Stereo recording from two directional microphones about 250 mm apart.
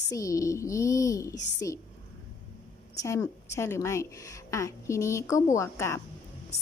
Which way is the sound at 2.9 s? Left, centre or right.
Centre.